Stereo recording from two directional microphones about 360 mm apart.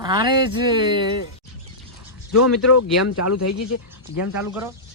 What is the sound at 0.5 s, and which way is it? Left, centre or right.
Speech, centre.